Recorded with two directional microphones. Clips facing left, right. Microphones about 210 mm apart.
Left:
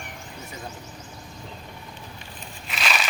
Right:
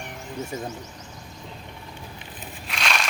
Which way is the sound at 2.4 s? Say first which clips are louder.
Even; centre (ahead or behind).